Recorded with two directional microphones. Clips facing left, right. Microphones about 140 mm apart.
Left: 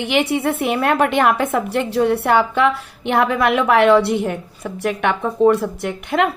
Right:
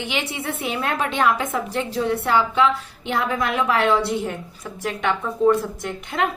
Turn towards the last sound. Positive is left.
turn(degrees=70)  # may be behind; listen again after turning